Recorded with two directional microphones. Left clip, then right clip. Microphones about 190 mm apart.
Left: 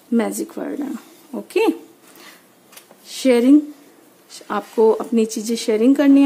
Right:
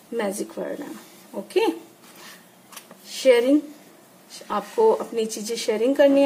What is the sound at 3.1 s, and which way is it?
Speech, 45° left (ahead or behind).